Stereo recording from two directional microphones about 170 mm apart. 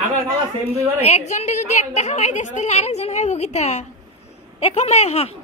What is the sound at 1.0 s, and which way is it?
A woman's voice, 40° left (ahead or behind).